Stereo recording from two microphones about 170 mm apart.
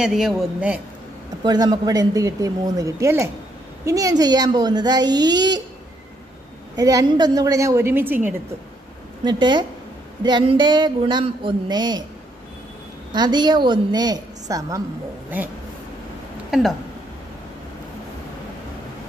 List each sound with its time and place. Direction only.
0.0 s a woman's voice: centre (ahead or behind)
1.4 s speech: 25° right (ahead or behind)
6.8 s speech: 20° right (ahead or behind)
9.2 s speech: 25° right (ahead or behind)
13.1 s speech: 25° right (ahead or behind)
16.4 s speech: centre (ahead or behind)